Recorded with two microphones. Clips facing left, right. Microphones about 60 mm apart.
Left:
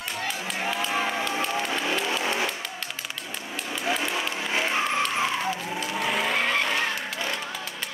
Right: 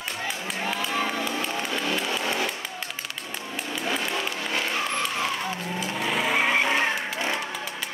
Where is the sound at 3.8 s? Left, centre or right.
Centre.